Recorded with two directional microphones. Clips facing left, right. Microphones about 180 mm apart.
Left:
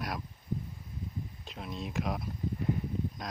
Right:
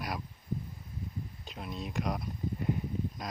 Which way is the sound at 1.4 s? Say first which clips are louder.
Even; centre (ahead or behind).